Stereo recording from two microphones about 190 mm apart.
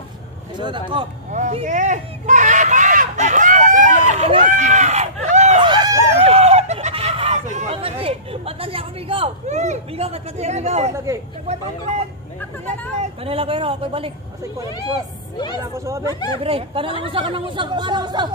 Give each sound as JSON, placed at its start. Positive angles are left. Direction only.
{"t": 0.6, "sound": "speech", "side_deg": -25}
{"t": 1.3, "sound": "a sound", "side_deg": -40}
{"t": 4.1, "sound": "run", "side_deg": -40}
{"t": 5.7, "sound": "a sound", "side_deg": -25}
{"t": 10.9, "sound": "speech", "side_deg": -15}
{"t": 13.0, "sound": "speech", "side_deg": -30}
{"t": 15.3, "sound": "speech", "side_deg": 25}
{"t": 15.6, "sound": "speech", "side_deg": -15}
{"t": 16.3, "sound": "speech", "side_deg": -30}